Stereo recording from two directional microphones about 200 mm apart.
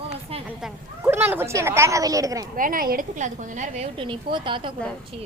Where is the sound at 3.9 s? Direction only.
25° right (ahead or behind).